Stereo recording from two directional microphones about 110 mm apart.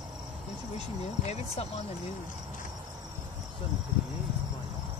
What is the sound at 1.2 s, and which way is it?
Speech, 75° left (ahead or behind).